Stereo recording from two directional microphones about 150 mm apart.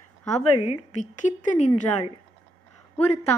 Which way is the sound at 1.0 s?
55° left (ahead or behind).